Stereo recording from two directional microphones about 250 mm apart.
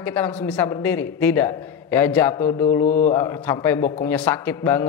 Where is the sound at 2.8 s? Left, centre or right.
Left.